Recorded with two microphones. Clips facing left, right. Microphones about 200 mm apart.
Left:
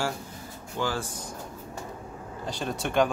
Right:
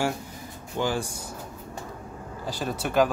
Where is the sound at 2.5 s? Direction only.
5° right (ahead or behind).